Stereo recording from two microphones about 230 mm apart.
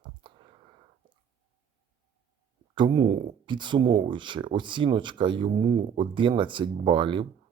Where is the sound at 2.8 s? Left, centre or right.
Centre.